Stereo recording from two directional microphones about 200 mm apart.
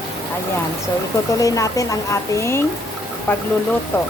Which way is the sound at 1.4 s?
15° left (ahead or behind).